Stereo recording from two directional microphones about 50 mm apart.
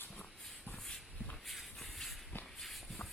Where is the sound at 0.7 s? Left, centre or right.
Left.